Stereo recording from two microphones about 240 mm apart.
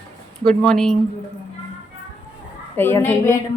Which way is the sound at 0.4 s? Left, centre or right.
Centre.